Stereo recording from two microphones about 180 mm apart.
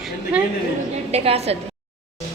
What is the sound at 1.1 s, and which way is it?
Speech, 35° right (ahead or behind).